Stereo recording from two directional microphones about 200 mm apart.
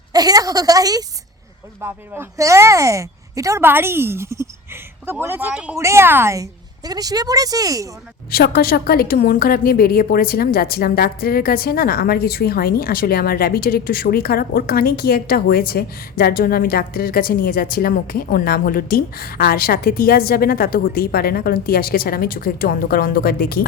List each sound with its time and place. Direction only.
0.1 s a woman's voice: 20° right (ahead or behind)
8.3 s a woman's voice: 50° left (ahead or behind)